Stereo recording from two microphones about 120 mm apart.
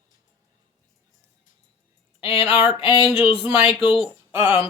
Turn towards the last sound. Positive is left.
turn(degrees=50)  # may be behind; listen again after turning